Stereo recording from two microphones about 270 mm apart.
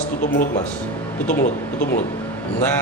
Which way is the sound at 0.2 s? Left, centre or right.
Left.